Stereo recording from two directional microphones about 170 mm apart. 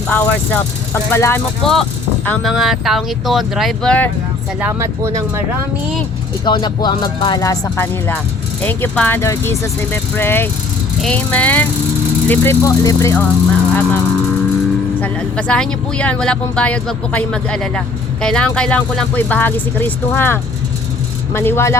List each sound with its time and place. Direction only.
0.1 s speech: 10° left (ahead or behind)
1.6 s speech: centre (ahead or behind)
4.6 s speech: 15° right (ahead or behind)
6.4 s speech: 25° left (ahead or behind); by 14.0 s 10° left (ahead or behind)
15.0 s speech: 5° left (ahead or behind)